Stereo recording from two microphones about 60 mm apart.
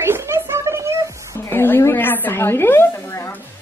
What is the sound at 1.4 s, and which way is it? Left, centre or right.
A woman's voice, left.